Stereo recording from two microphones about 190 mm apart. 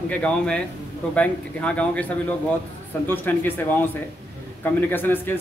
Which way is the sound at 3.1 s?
10° left (ahead or behind).